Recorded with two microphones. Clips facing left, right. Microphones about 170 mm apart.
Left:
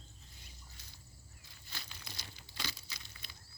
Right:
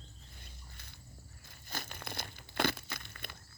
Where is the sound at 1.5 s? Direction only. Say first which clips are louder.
Right 9 dB; 50° right (ahead or behind).